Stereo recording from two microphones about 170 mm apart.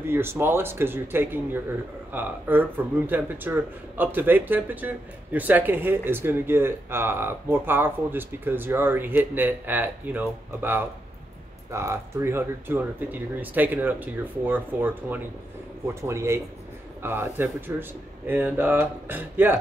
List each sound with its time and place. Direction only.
0.0 s speech: 15° right (ahead or behind)